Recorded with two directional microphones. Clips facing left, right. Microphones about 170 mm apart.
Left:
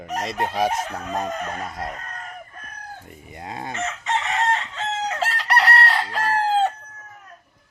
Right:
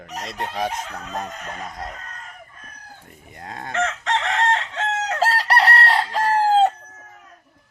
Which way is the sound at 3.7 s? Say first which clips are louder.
Right 4 dB; 90° right.